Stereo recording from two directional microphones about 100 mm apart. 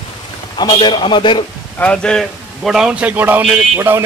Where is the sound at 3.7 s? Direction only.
25° right (ahead or behind).